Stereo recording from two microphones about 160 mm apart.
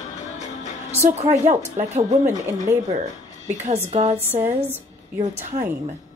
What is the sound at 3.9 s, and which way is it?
Speech, 45° right (ahead or behind).